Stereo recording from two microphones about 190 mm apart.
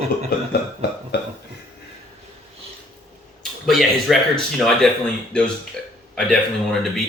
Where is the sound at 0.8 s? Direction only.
60° left (ahead or behind).